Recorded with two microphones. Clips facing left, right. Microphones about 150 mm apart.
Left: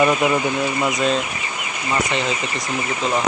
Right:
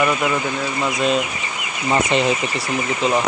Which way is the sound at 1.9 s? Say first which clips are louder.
Right 4 dB; 20° right (ahead or behind).